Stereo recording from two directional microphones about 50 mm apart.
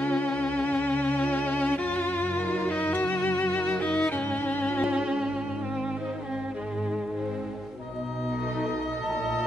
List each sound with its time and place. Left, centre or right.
0.0 s violin: left
2.8 s music: left
4.8 s music: centre